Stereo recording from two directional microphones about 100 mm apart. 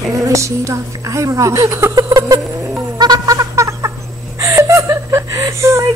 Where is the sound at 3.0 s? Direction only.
40° right (ahead or behind).